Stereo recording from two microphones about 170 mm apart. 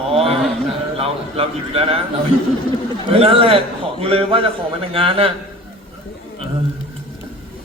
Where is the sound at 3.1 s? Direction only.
35° right (ahead or behind).